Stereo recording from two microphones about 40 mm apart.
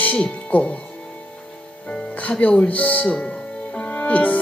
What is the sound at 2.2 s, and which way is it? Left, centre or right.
Speech, left.